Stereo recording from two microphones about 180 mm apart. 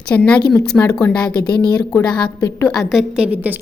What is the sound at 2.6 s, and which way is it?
Speech, centre (ahead or behind).